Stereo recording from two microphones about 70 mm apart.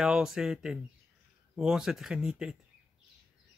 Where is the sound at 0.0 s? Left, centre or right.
Centre.